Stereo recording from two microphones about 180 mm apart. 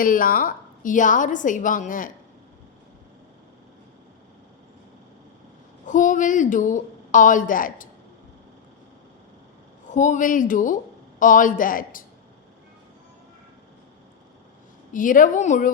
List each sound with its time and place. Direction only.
0.0 s a woman's voice: 50° left (ahead or behind)
5.8 s a woman's voice: 45° left (ahead or behind)
9.9 s a woman's voice: 45° left (ahead or behind)
14.9 s a woman's voice: 45° left (ahead or behind)